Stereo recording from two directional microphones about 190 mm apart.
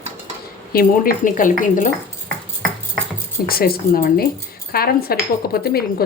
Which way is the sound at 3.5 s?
50° left (ahead or behind).